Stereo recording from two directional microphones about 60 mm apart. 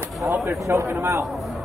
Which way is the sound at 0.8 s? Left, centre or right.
Right.